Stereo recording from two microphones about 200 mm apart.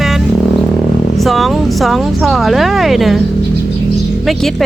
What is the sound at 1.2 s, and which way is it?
Speech, centre (ahead or behind).